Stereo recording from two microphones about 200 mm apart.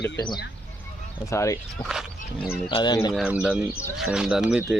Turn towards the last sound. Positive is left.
turn(degrees=-5)  # may be behind; listen again after turning